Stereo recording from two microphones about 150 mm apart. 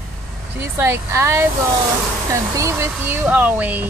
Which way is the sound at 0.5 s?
15° right (ahead or behind).